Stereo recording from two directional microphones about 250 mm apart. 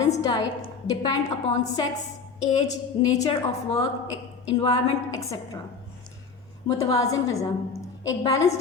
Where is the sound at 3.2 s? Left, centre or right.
Centre.